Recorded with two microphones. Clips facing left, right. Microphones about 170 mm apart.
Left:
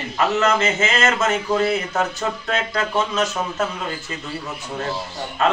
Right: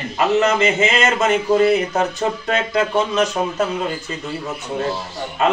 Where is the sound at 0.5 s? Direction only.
15° right (ahead or behind).